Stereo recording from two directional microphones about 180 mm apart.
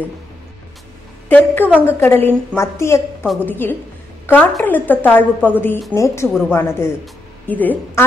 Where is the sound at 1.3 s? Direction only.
10° left (ahead or behind).